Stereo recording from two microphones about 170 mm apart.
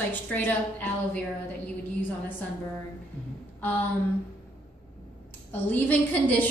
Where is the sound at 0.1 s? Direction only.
10° left (ahead or behind).